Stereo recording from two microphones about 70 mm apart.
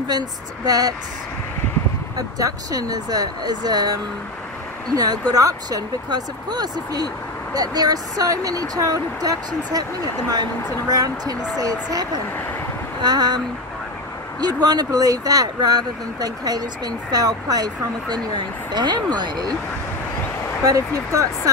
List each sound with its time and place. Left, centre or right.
0.7 s speech: right
2.1 s speech: right
10.9 s speech: right
13.0 s speech: right
14.4 s speech: right
18.7 s speech: right
20.6 s speech: right